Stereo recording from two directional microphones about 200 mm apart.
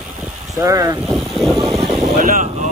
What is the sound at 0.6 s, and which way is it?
Speech, 15° right (ahead or behind).